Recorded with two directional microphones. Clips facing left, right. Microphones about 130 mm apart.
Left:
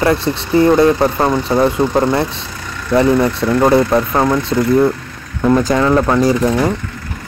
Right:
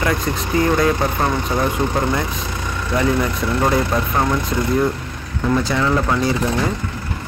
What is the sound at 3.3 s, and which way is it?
Speech, 35° left (ahead or behind).